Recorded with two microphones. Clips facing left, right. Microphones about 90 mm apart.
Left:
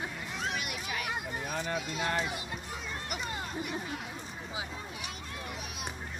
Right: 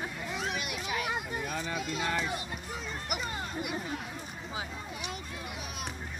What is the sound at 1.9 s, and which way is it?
Speech, 50° left (ahead or behind).